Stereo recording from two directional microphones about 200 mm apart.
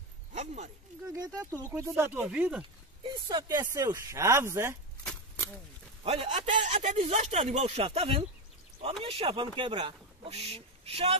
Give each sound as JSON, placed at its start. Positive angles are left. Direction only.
{"t": 0.3, "sound": "a sound", "side_deg": -35}
{"t": 1.1, "sound": "speech", "side_deg": -20}
{"t": 3.3, "sound": "speech", "side_deg": -20}
{"t": 6.0, "sound": "speech", "side_deg": -30}